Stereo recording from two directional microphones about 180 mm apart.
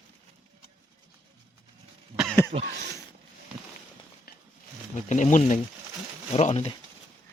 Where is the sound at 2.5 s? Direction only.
35° right (ahead or behind).